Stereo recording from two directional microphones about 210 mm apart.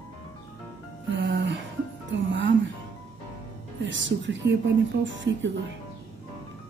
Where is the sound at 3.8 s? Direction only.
60° right (ahead or behind).